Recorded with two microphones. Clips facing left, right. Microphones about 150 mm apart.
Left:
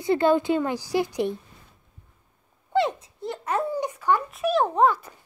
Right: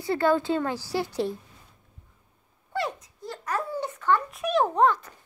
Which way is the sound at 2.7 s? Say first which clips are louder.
Left 7 dB; 25° left (ahead or behind).